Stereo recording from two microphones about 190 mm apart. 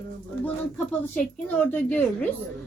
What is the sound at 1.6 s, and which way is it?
Speech, 10° left (ahead or behind).